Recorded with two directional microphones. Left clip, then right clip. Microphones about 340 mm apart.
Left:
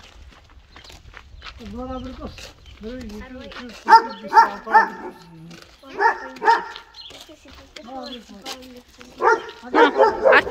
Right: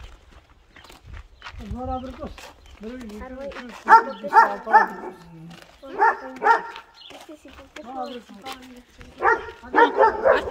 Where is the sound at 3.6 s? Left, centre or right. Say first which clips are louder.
Left 1 dB; centre.